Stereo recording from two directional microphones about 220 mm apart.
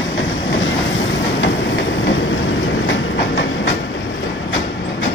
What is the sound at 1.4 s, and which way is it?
Train, 55° left (ahead or behind).